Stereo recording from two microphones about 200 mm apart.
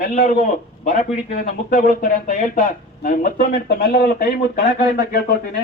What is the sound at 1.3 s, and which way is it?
Speech, 40° left (ahead or behind).